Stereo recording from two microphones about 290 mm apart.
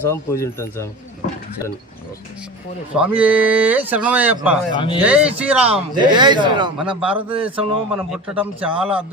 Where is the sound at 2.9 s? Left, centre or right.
Centre.